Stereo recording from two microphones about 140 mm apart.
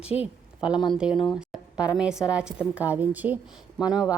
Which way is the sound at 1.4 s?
5° right (ahead or behind).